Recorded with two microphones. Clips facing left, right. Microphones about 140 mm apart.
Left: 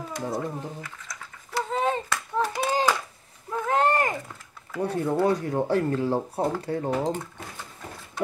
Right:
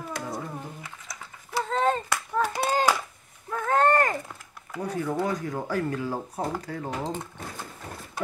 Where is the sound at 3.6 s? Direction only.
15° left (ahead or behind).